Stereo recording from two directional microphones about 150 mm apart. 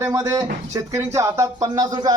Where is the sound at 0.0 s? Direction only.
20° right (ahead or behind).